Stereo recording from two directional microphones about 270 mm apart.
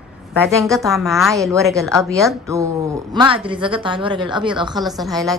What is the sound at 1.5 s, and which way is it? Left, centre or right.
A woman's voice, centre.